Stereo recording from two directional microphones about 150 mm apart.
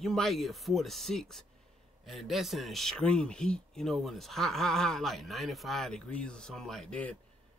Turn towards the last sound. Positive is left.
turn(degrees=5)  # may be behind; listen again after turning